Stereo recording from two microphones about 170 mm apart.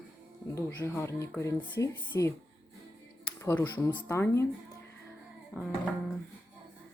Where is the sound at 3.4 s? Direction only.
15° left (ahead or behind).